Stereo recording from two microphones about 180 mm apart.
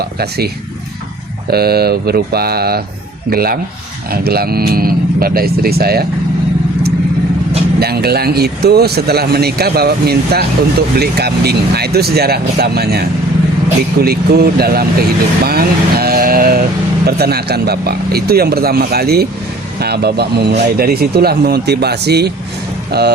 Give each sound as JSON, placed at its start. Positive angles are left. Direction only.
{"t": 0.0, "sound": "speech", "side_deg": -60}
{"t": 7.8, "sound": "speech", "side_deg": -60}